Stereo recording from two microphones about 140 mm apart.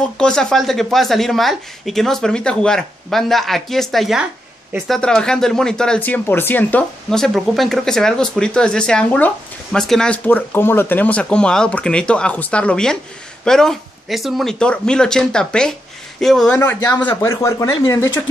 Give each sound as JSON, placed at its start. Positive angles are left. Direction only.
{"t": 0.2, "sound": "speech", "side_deg": 5}
{"t": 17.0, "sound": "speech", "side_deg": 20}